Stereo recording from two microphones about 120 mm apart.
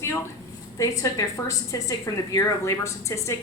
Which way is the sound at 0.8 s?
30° left (ahead or behind).